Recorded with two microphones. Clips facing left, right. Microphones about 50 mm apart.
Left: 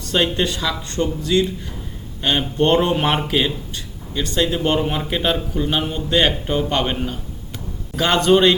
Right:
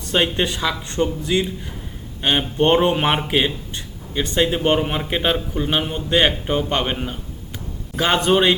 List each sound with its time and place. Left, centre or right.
0.0 s speech: centre